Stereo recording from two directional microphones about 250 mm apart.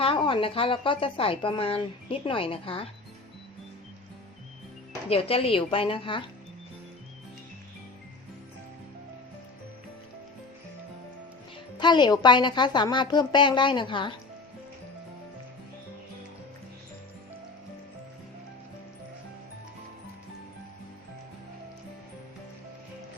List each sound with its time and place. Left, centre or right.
0.0 s speech: left
5.0 s speech: left
11.8 s a woman's voice: centre